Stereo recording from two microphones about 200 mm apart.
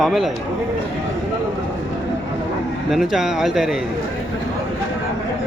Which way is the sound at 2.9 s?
Centre (ahead or behind).